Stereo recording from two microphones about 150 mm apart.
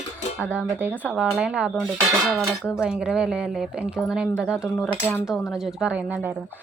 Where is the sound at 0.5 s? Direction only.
15° right (ahead or behind).